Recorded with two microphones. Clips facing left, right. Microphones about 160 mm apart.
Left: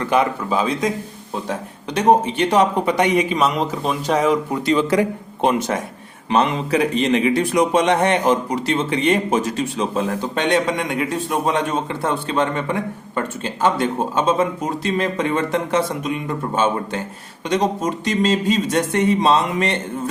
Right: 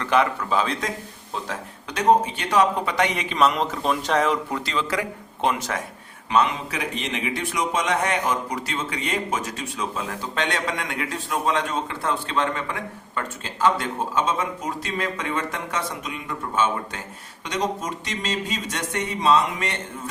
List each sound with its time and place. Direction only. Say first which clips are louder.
0.0 s a man's voice: left 3 dB; 15° left (ahead or behind)
4.6 s a man's voice: left 9 dB; 20° left (ahead or behind)
6.3 s a man's voice: left 5 dB; 30° left (ahead or behind)